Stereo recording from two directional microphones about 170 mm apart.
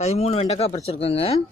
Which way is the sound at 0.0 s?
40° left (ahead or behind).